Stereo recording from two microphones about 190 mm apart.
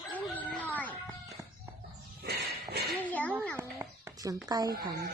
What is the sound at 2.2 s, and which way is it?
Walk, 55° right (ahead or behind).